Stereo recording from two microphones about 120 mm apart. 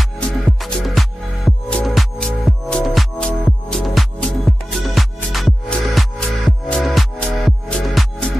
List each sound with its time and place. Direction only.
0.6 s music: centre (ahead or behind)